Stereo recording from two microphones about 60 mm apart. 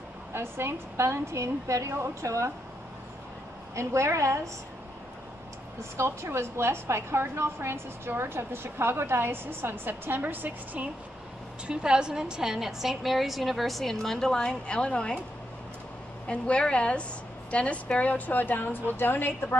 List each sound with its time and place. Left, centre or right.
0.3 s a woman's voice: right
3.7 s a woman's voice: right
5.9 s a woman's voice: right
11.6 s a woman's voice: centre
16.3 s a woman's voice: centre; by 19.6 s left